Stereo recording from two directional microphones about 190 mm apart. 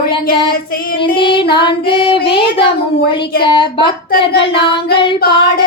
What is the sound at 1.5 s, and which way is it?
Female singing, 25° left (ahead or behind).